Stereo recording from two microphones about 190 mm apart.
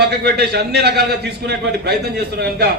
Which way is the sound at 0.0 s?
60° right (ahead or behind).